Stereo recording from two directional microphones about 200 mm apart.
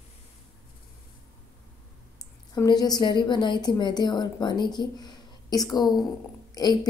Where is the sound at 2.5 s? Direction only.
20° left (ahead or behind).